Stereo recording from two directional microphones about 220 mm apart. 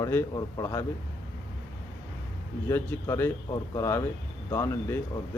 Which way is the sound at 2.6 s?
10° left (ahead or behind).